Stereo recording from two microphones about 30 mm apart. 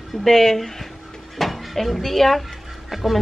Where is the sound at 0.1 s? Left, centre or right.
Centre.